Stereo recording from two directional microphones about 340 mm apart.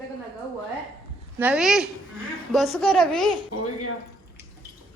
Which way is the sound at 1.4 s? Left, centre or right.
Centre.